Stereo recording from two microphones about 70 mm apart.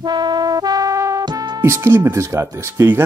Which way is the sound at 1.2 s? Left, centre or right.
Right.